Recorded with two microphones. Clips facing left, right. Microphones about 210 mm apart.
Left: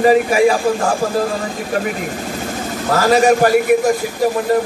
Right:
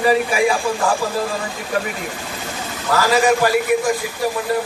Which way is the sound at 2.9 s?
45° left (ahead or behind).